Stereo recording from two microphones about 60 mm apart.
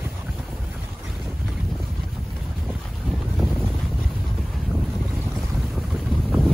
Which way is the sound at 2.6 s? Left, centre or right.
Centre.